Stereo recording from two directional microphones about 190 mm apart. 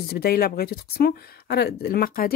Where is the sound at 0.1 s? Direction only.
55° left (ahead or behind).